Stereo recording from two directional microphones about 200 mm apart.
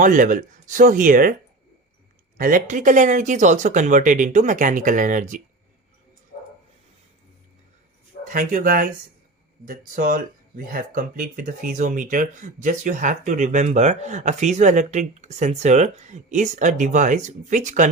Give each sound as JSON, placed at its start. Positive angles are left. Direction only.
{"t": 0.0, "sound": "speech", "side_deg": -40}
{"t": 2.4, "sound": "speech", "side_deg": -40}
{"t": 8.3, "sound": "speech", "side_deg": -40}